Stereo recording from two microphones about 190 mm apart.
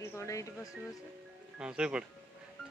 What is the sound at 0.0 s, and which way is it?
Music, 15° left (ahead or behind).